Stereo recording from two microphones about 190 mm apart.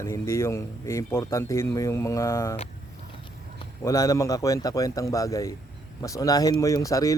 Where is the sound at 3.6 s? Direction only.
15° left (ahead or behind).